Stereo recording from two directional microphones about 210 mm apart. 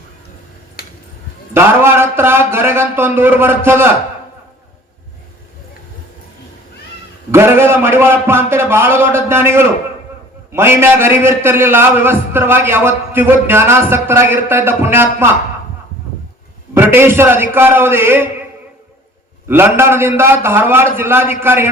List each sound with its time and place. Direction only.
0.8 s a sound: 45° left (ahead or behind)
1.5 s a man's voice: 10° right (ahead or behind)
7.3 s a man's voice: 10° right (ahead or behind)
16.7 s a man's voice: 10° right (ahead or behind)
19.5 s a man's voice: 10° right (ahead or behind)